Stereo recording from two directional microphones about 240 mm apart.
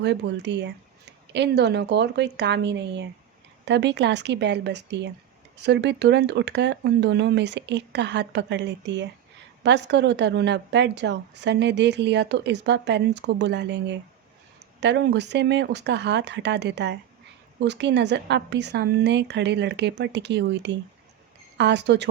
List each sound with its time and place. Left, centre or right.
0.0 s a woman's voice: right